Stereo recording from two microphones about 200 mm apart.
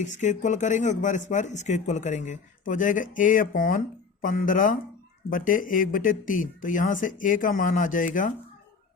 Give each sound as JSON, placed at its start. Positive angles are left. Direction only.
{"t": 0.0, "sound": "speech", "side_deg": 35}